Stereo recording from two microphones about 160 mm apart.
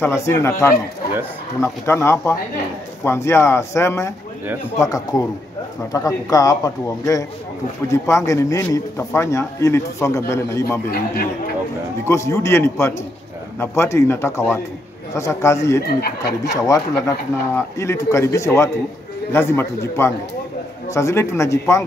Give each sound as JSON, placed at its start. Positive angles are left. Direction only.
{"t": 0.0, "sound": "a man's voice", "side_deg": 15}
{"t": 12.1, "sound": "speech", "side_deg": 20}
{"t": 15.8, "sound": "speech", "side_deg": 80}
{"t": 16.6, "sound": "a man's voice", "side_deg": 20}